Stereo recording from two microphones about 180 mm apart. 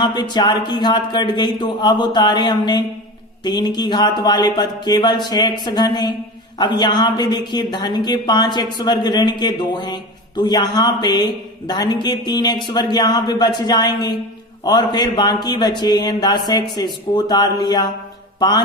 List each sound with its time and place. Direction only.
0.0 s a woman's voice: 25° left (ahead or behind)
18.3 s music: 25° left (ahead or behind)